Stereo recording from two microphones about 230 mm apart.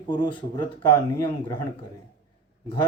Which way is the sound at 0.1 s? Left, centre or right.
Centre.